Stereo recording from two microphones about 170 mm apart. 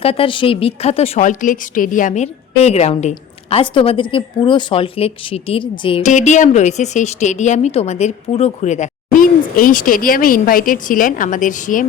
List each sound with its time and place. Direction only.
0.0 s a woman's voice: 35° left (ahead or behind)
6.0 s speech: 45° left (ahead or behind)